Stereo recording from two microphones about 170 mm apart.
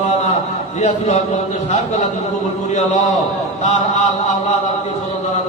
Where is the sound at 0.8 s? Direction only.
45° left (ahead or behind).